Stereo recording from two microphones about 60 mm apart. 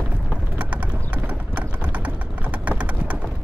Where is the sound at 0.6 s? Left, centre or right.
Right.